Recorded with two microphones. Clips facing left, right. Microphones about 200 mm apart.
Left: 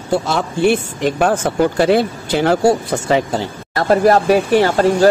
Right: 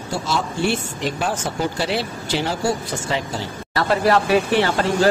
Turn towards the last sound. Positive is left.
turn(degrees=45)  # may be behind; listen again after turning